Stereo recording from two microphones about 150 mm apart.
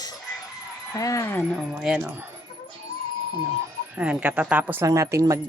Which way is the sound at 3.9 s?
10° right (ahead or behind).